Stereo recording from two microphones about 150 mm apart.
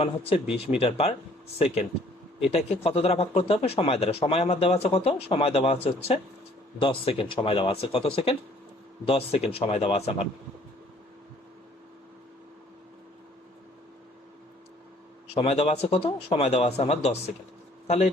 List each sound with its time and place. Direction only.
0.0 s speech: 40° left (ahead or behind)
15.3 s a man's voice: 40° left (ahead or behind)